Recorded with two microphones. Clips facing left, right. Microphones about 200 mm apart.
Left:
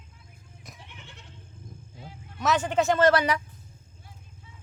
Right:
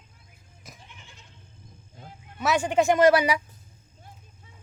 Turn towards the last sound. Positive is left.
turn(degrees=-10)  # may be behind; listen again after turning